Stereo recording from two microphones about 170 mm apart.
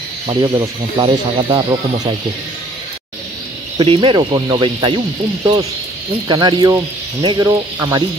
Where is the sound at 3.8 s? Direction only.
30° right (ahead or behind).